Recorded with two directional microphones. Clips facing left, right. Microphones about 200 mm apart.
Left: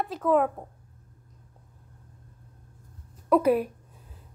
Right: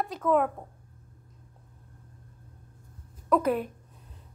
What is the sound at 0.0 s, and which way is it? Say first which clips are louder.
Humming: left 2 dB; centre (ahead or behind).